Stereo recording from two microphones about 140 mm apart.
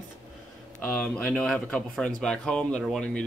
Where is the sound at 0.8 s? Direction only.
10° left (ahead or behind).